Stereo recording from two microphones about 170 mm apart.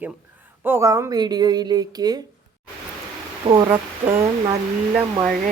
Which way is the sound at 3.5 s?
25° right (ahead or behind).